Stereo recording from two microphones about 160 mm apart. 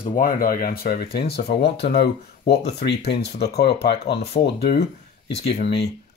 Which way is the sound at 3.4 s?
80° left.